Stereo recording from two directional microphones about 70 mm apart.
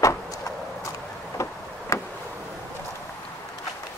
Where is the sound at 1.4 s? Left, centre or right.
Left.